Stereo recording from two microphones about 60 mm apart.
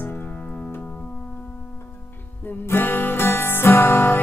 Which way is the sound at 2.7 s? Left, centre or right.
Left.